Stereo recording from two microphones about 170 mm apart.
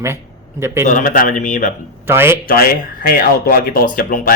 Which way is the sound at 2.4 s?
60° left (ahead or behind).